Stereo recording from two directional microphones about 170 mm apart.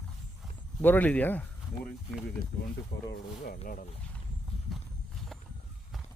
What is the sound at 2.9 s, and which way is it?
Speech, 75° left (ahead or behind).